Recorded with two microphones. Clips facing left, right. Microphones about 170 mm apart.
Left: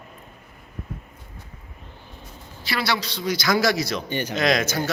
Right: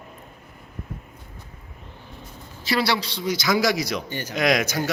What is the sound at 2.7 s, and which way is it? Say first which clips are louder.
A man's voice: right 3 dB; 25° right (ahead or behind).